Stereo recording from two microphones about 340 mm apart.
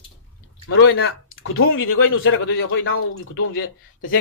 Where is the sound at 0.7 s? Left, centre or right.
Left.